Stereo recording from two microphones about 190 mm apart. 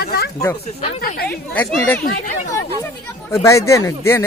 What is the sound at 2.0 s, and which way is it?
Speech, 45° left (ahead or behind).